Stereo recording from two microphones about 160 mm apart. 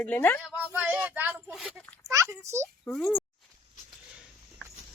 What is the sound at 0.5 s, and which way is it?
Speech, 10° right (ahead or behind).